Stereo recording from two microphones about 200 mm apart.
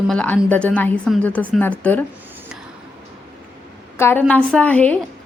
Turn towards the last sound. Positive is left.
turn(degrees=5)  # may be behind; listen again after turning